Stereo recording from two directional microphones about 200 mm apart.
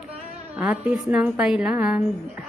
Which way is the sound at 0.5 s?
5° right (ahead or behind).